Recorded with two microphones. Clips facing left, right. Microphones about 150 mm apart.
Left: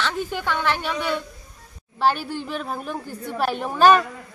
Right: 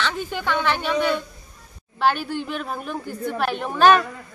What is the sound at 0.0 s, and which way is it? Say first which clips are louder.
A woman's voice: even; 5° left (ahead or behind).